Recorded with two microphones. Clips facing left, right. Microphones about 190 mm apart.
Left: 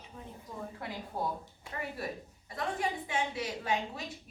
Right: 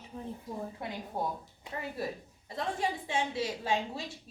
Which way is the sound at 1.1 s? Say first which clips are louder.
Right 1 dB; 20° right (ahead or behind).